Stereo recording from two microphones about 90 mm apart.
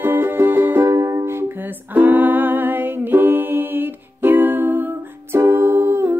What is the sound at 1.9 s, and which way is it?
Music, 20° right (ahead or behind).